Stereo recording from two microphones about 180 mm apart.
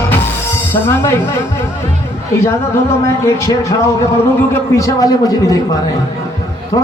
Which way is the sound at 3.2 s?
15° left (ahead or behind).